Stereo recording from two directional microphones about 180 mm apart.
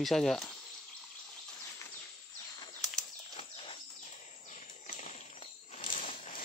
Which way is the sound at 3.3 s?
35° left (ahead or behind).